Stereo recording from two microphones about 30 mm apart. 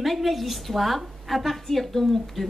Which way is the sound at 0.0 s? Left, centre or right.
Centre.